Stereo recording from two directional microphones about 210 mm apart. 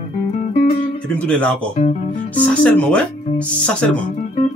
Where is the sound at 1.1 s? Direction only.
5° left (ahead or behind).